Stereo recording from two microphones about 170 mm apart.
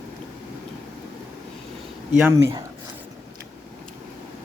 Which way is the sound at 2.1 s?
5° right (ahead or behind).